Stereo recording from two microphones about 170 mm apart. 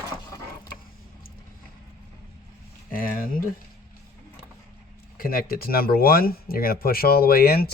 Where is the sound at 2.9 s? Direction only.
55° left (ahead or behind).